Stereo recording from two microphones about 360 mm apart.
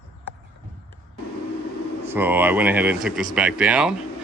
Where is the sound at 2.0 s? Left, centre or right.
Centre.